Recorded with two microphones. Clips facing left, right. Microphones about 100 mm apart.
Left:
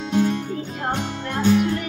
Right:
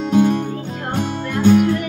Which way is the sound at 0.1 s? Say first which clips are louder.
Right 5 dB; 50° right (ahead or behind).